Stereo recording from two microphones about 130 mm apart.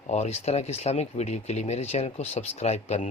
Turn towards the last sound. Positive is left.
turn(degrees=60)  # may be behind; listen again after turning